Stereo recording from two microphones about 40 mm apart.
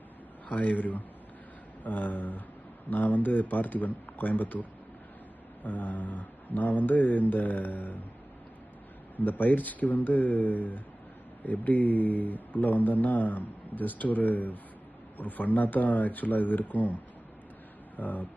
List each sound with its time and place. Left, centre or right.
0.4 s a man's voice: left
5.6 s speech: left
9.1 s speech: left
17.9 s speech: left